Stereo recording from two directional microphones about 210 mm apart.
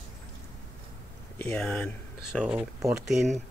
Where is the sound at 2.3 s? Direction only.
5° right (ahead or behind).